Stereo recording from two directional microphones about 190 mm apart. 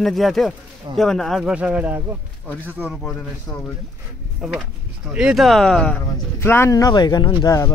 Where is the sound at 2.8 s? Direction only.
10° left (ahead or behind).